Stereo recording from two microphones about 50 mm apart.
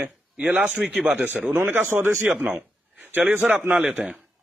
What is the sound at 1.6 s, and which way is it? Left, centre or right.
Speech, right.